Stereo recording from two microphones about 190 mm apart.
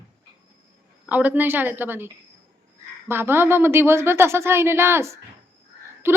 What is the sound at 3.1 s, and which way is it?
A woman's voice, 10° right (ahead or behind).